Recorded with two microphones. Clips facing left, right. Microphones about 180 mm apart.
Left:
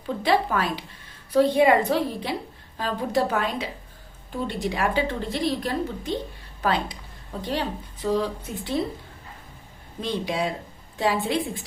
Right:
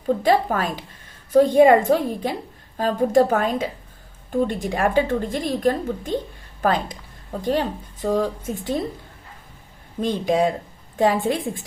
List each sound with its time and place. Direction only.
0.2 s a woman's voice: 45° right (ahead or behind)
10.0 s a woman's voice: 45° right (ahead or behind)